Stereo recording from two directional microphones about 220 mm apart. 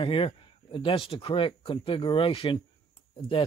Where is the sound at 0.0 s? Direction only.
25° left (ahead or behind).